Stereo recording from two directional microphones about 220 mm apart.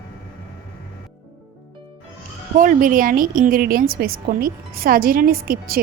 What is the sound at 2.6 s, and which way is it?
A woman's voice, 35° right (ahead or behind).